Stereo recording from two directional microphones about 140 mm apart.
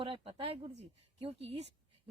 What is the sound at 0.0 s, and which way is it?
Speech, 40° right (ahead or behind).